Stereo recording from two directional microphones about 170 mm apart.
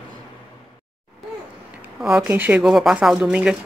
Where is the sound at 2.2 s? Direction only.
10° right (ahead or behind).